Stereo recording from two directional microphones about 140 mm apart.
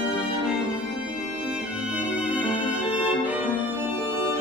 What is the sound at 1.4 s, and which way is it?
Music, 5° right (ahead or behind).